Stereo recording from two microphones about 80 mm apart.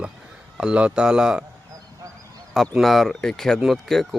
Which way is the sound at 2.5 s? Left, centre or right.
Centre.